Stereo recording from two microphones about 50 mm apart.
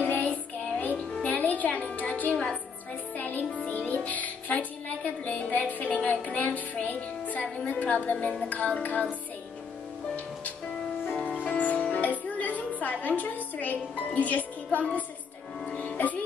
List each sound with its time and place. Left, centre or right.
0.0 s music: left
3.2 s speech: left
11.4 s music: left
11.9 s a woman's voice: left
15.6 s music: left